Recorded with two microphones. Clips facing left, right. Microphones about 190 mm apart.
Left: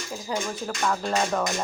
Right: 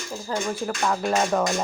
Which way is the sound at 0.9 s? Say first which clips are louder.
Right 3 dB; 10° right (ahead or behind).